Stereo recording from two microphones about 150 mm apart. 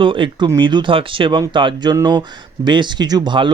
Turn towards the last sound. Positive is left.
turn(degrees=-30)  # may be behind; listen again after turning